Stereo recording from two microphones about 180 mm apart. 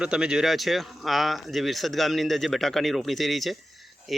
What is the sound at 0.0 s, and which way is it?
A man's voice, 5° right (ahead or behind).